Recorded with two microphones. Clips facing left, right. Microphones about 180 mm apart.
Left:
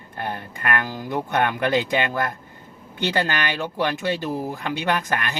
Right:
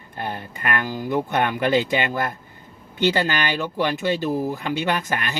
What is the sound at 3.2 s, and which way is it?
Speech, 55° left (ahead or behind).